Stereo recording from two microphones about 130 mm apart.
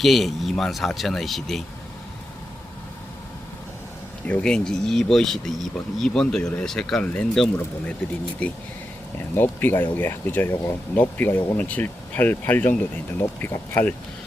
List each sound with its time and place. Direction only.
0.0 s speech: centre (ahead or behind)
4.3 s speech: 10° left (ahead or behind)
9.1 s speech: 15° left (ahead or behind)